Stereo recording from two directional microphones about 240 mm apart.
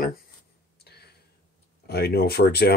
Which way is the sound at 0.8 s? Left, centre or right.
Left.